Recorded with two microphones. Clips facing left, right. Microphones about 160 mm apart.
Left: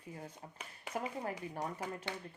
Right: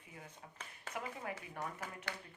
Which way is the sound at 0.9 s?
15° left (ahead or behind).